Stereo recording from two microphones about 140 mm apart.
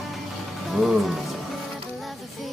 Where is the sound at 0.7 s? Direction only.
Centre (ahead or behind).